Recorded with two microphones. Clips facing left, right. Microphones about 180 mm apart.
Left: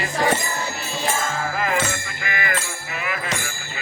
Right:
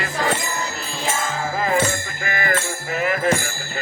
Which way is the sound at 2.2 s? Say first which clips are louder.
Right 4 dB; 40° right (ahead or behind).